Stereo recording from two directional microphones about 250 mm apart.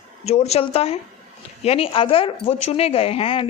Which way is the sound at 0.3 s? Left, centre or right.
Left.